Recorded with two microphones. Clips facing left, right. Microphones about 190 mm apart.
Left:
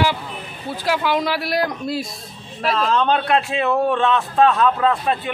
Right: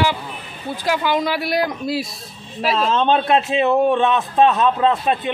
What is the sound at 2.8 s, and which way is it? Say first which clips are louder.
A man's voice: right 1 dB; 25° right (ahead or behind).